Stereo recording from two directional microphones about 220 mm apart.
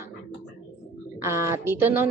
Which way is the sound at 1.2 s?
10° right (ahead or behind).